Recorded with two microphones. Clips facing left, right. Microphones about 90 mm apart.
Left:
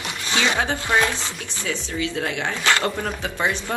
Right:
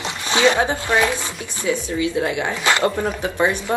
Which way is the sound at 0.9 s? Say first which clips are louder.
Right 2 dB; 15° right (ahead or behind).